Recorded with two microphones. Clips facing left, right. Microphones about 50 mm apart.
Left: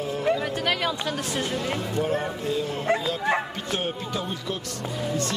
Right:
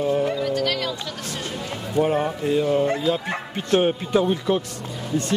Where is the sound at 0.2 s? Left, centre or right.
Centre.